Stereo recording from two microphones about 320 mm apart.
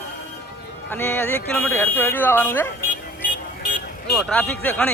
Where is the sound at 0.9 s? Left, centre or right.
Centre.